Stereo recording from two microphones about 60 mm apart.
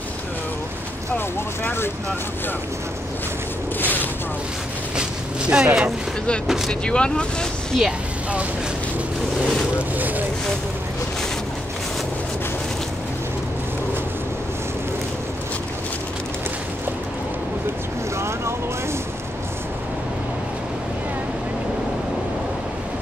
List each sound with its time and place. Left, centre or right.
1.1 s speech: left
4.9 s speech: centre
6.7 s speech: centre
9.8 s speech: right
18.1 s boat: right